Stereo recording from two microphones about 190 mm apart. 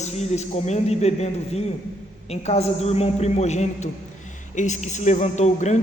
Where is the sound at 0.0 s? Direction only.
35° left (ahead or behind).